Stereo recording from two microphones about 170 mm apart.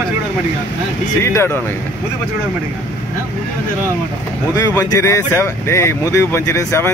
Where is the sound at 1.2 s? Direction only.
15° left (ahead or behind).